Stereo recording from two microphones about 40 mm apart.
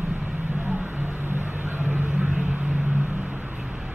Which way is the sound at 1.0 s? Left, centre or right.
Right.